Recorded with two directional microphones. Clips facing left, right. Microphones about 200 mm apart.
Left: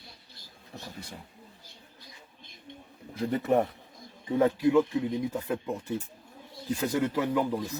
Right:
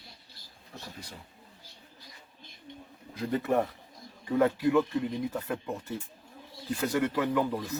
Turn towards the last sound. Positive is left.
turn(degrees=15)  # may be behind; listen again after turning